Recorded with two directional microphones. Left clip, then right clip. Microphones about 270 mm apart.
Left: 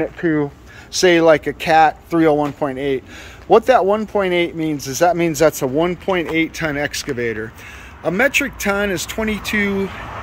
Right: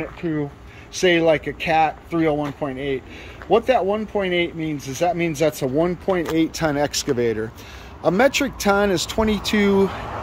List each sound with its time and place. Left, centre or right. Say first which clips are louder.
0.0 s speech: left 7 dB; left
1.0 s speech: left 5 dB; centre